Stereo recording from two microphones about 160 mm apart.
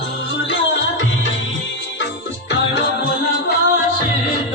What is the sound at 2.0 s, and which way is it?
Music, 90° left.